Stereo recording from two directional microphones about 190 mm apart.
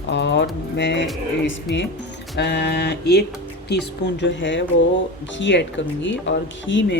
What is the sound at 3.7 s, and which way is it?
Speech, 65° left (ahead or behind).